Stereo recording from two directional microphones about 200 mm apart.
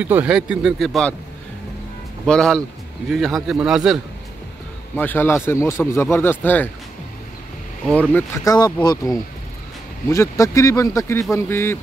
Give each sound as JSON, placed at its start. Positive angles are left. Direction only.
{"t": 0.0, "sound": "a man's voice", "side_deg": -5}
{"t": 2.2, "sound": "a man's voice", "side_deg": 5}
{"t": 4.9, "sound": "speech", "side_deg": 10}
{"t": 8.1, "sound": "speech", "side_deg": 20}